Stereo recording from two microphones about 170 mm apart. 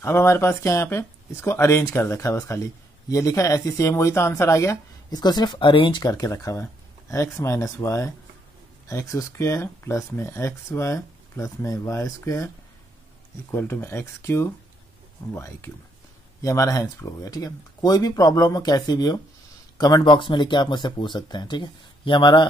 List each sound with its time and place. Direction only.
0.0 s speech: 15° left (ahead or behind)
13.5 s speech: 15° left (ahead or behind)